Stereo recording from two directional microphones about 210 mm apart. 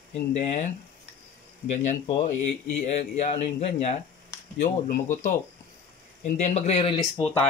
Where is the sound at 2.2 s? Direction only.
35° left (ahead or behind).